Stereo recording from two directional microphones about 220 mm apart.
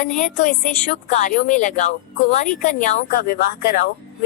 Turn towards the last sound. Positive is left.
turn(degrees=45)  # may be behind; listen again after turning